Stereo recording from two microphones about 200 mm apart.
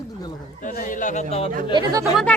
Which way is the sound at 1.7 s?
20° right (ahead or behind).